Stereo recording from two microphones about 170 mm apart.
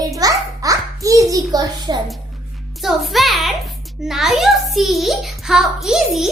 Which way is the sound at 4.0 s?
Centre (ahead or behind).